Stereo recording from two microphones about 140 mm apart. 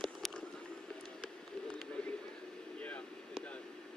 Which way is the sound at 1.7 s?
5° left (ahead or behind).